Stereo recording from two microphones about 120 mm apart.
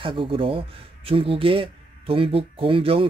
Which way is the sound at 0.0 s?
45° right (ahead or behind).